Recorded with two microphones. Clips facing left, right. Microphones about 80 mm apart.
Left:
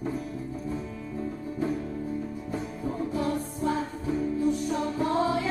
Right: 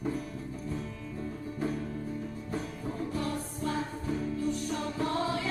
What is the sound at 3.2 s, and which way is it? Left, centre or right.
Music, left.